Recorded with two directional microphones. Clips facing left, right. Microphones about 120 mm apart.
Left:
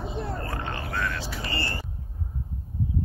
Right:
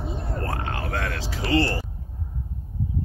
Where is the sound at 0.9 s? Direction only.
85° right.